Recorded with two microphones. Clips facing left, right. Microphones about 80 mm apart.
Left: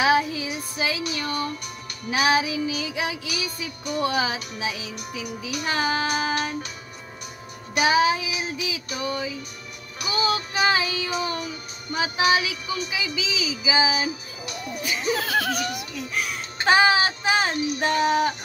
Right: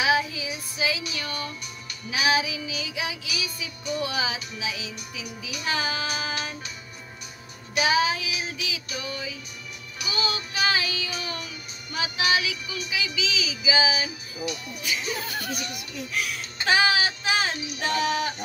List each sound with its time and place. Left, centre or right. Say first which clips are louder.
0.0 s child singing: left 3 dB; left
2.0 s music: left 3 dB; left
8.9 s music: left 8 dB; left
11.1 s music: left 7 dB; left
15.1 s laughter: left 8 dB; left
15.5 s a child's voice: left 5 dB; left